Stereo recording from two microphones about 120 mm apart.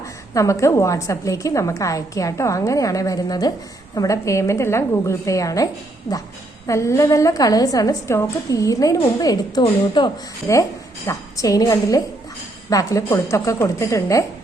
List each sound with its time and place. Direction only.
0.0 s a woman's voice: 25° left (ahead or behind)
6.7 s a woman's voice: 25° left (ahead or behind)
10.5 s a woman's voice: 25° left (ahead or behind)